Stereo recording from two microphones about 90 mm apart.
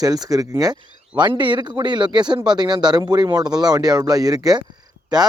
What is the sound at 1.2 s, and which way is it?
Speech, 60° right (ahead or behind).